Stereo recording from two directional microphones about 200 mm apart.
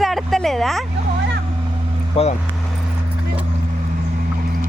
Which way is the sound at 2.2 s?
30° left (ahead or behind).